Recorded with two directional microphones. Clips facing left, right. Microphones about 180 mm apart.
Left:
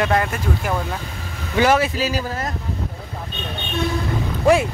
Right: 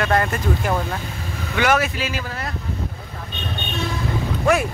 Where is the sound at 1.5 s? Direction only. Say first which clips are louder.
Left 3 dB; 30° left (ahead or behind).